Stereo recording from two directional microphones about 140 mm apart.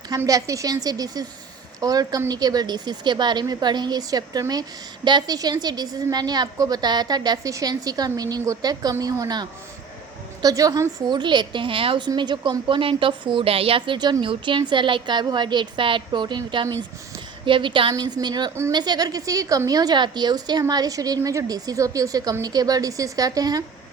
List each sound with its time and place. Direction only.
0.1 s a woman's voice: 25° right (ahead or behind)